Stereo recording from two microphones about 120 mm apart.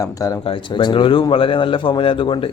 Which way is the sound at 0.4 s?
40° left (ahead or behind).